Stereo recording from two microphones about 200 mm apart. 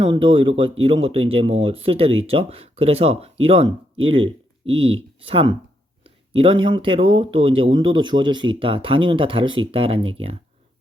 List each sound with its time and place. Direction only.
0.0 s speech: 25° right (ahead or behind)